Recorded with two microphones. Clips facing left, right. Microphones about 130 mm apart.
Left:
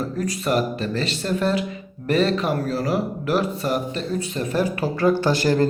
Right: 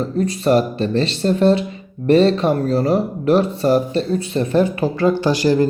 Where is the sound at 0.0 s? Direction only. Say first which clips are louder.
Right 6 dB; 30° right (ahead or behind).